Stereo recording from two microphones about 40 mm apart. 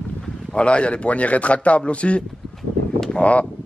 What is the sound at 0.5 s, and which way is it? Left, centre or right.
A man's voice, left.